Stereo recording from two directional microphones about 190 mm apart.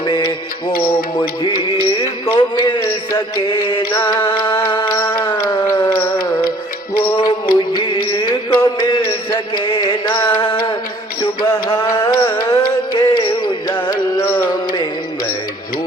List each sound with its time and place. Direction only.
0.0 s music: 25° left (ahead or behind)
1.4 s music: 25° left (ahead or behind)
4.9 s a sound: 20° left (ahead or behind)
7.0 s music: 25° left (ahead or behind)
13.8 s carnatic music: 25° left (ahead or behind)